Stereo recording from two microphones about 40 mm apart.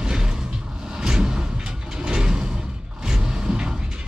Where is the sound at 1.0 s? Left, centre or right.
Centre.